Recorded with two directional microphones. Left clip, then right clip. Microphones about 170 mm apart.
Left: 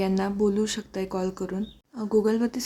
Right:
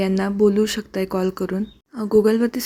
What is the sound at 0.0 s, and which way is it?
Speech, 25° right (ahead or behind).